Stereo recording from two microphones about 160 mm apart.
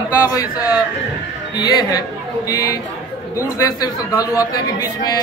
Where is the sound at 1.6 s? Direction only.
25° left (ahead or behind).